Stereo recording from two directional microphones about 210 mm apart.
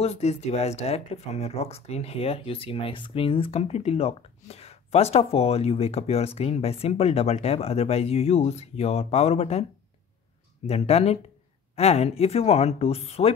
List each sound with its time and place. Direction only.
0.0 s speech: 30° left (ahead or behind)
10.7 s speech: 30° left (ahead or behind)